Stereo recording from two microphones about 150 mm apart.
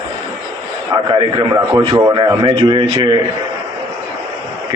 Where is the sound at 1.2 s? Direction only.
30° right (ahead or behind).